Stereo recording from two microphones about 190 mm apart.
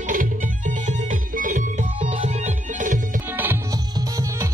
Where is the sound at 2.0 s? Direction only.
25° right (ahead or behind).